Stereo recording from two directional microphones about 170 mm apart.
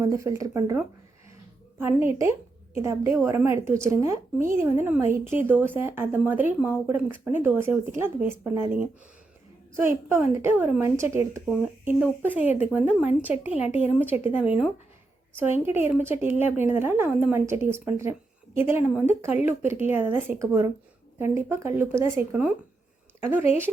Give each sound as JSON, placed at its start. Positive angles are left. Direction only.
{"t": 0.0, "sound": "speech", "side_deg": -15}